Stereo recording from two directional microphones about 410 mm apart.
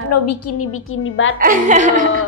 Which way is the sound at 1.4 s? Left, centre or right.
Centre.